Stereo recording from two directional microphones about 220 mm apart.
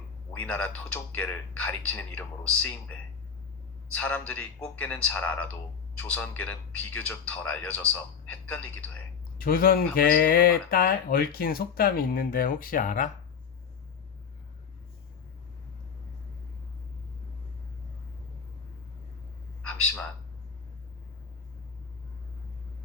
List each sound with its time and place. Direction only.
0.3 s speech: 5° left (ahead or behind)
3.9 s speech: 5° left (ahead or behind)
9.4 s speech: 45° left (ahead or behind)